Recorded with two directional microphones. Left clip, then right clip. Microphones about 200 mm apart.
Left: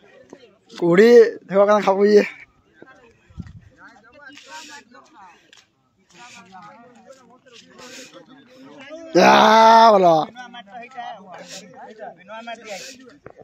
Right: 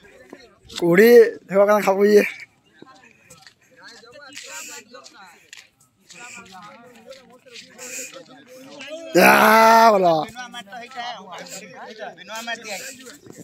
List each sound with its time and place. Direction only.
0.3 s speech: centre (ahead or behind)
3.9 s a sound: 35° right (ahead or behind)
6.5 s a sound: centre (ahead or behind)
7.7 s snake: 10° left (ahead or behind)
8.8 s wail: 25° right (ahead or behind)
9.1 s speech: centre (ahead or behind)
10.0 s speech: 25° left (ahead or behind)
10.3 s a sound: 10° left (ahead or behind)
11.0 s speech: 20° left (ahead or behind)
11.9 s speech: 5° right (ahead or behind)
12.2 s speech: 30° left (ahead or behind)
12.8 s speech: 5° right (ahead or behind)